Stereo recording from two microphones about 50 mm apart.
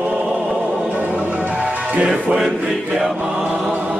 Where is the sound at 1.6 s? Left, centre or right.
Right.